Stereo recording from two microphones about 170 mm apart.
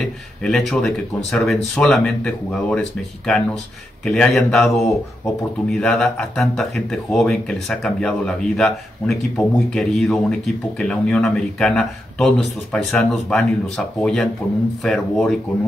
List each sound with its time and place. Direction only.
0.0 s speech: 5° left (ahead or behind)